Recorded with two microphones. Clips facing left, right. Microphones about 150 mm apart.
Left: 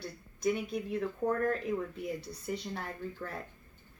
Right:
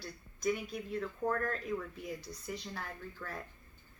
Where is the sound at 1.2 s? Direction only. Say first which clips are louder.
Left 4 dB; 25° left (ahead or behind).